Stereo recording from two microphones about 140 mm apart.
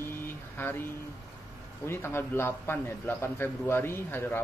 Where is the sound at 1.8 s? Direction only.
15° left (ahead or behind).